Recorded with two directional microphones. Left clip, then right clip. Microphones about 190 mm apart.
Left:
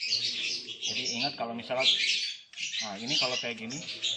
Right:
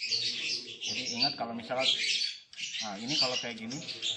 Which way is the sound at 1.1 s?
30° left (ahead or behind).